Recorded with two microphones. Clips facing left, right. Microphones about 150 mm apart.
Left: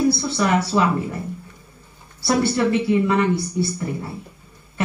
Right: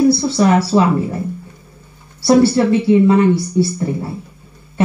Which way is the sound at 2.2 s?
30° right (ahead or behind).